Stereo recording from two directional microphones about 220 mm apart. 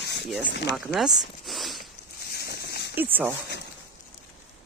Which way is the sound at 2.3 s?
45° left (ahead or behind).